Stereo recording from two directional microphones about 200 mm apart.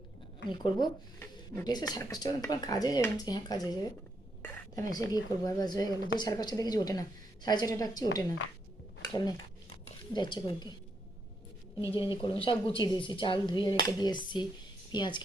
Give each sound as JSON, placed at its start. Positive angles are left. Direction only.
{"t": 0.5, "sound": "speech", "side_deg": 20}
{"t": 9.0, "sound": "dishes", "side_deg": 20}
{"t": 10.2, "sound": "speech", "side_deg": 25}
{"t": 11.9, "sound": "speech", "side_deg": 25}